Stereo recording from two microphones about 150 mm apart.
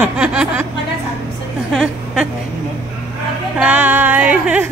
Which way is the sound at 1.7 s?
Centre (ahead or behind).